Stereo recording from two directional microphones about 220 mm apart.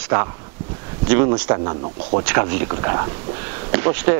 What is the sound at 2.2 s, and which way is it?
Speech, 10° right (ahead or behind).